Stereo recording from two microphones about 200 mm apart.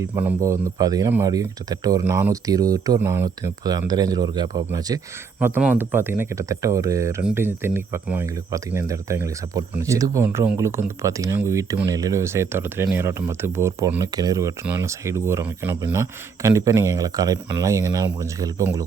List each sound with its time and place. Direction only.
0.0 s speech: 10° right (ahead or behind)
5.4 s speech: 10° right (ahead or behind)